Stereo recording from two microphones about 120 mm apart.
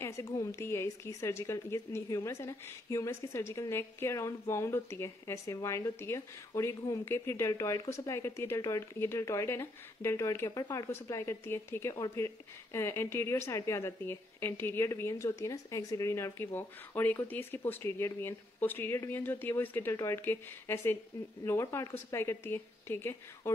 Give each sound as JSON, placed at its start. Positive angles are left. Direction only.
{"t": 0.0, "sound": "a woman's voice", "side_deg": 25}